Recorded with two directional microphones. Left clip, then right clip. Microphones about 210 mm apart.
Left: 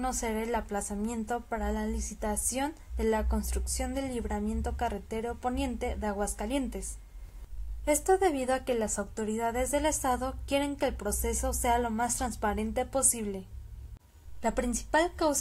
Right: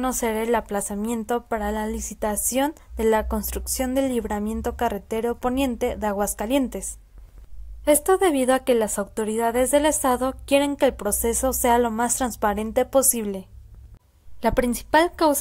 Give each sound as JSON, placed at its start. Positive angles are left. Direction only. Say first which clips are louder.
{"t": 0.0, "sound": "a woman's voice", "louder": "right 8 dB", "side_deg": -45}
{"t": 7.8, "sound": "a woman's voice", "louder": "right 7 dB", "side_deg": -40}
{"t": 14.4, "sound": "a woman's voice", "louder": "right 9 dB", "side_deg": -35}